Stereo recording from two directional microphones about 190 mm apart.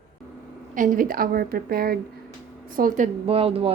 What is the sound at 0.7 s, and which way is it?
A woman's voice, 45° right (ahead or behind).